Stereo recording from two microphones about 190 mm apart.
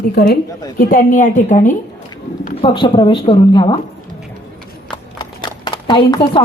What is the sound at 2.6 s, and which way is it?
A woman's voice, 25° left (ahead or behind).